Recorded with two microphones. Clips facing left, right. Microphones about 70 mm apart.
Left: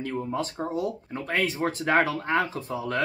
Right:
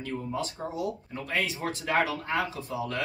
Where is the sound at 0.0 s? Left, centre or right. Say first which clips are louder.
Left 3 dB; left.